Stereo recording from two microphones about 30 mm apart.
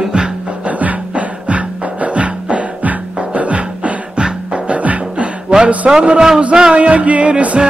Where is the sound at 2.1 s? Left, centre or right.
Right.